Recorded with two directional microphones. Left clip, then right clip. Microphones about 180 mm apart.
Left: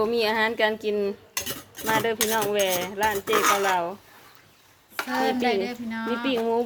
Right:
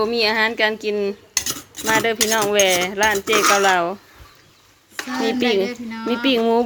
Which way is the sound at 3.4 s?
20° right (ahead or behind).